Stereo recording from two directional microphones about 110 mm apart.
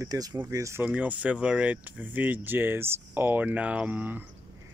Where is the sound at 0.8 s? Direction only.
15° right (ahead or behind).